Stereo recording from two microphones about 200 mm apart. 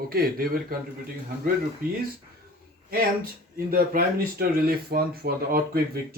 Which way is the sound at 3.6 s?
50° right (ahead or behind).